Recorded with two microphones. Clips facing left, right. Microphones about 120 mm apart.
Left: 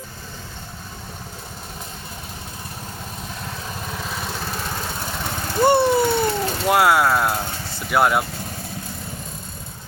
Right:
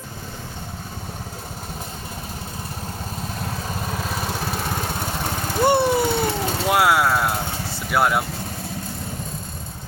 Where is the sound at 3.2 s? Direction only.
40° right (ahead or behind).